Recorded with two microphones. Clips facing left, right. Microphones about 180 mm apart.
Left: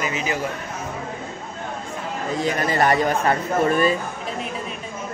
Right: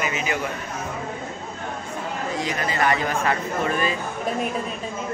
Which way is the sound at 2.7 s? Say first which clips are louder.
Left 4 dB; 40° left (ahead or behind).